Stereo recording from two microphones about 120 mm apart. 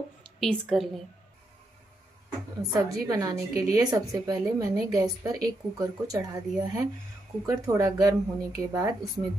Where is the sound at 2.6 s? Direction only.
30° right (ahead or behind).